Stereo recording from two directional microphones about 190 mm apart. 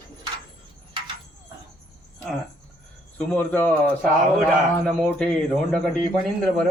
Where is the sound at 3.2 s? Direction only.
5° left (ahead or behind).